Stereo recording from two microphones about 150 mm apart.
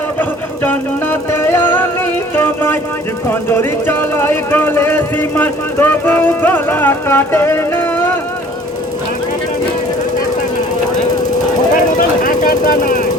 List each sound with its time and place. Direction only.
0.2 s music: 10° left (ahead or behind)
3.2 s a sound: 15° left (ahead or behind)
11.7 s vehicle: 60° left (ahead or behind)